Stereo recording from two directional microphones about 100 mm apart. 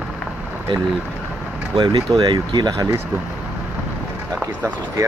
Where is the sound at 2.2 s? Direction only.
50° right (ahead or behind).